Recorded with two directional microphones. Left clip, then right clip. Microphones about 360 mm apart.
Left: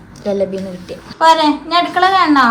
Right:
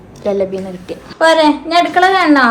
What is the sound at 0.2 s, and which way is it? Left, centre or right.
Speech, centre.